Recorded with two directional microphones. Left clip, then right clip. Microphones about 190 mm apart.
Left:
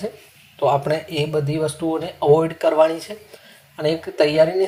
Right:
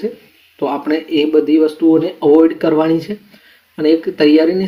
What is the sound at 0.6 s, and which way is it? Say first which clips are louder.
Speech: right 1 dB; 35° left (ahead or behind).